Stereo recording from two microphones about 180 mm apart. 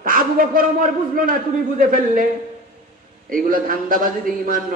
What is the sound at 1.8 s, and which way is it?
Speech, 50° right (ahead or behind).